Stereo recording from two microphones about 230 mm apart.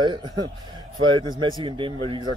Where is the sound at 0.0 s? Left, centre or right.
Centre.